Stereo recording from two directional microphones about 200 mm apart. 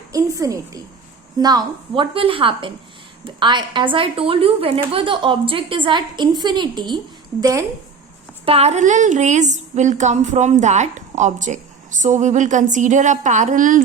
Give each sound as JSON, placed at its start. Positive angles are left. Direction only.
{"t": 0.1, "sound": "a woman's voice", "side_deg": -15}
{"t": 8.4, "sound": "a woman's voice", "side_deg": -30}